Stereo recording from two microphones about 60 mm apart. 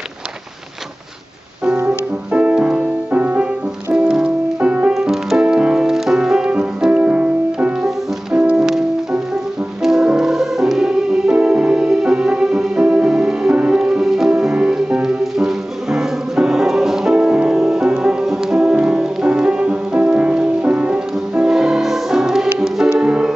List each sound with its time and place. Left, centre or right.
1.9 s music: right
4.9 s music: centre
5.4 s music: centre
9.8 s music: centre
14.5 s music: centre